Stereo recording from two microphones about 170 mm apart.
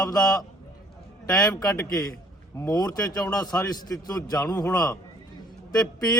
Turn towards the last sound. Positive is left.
turn(degrees=20)  # may be behind; listen again after turning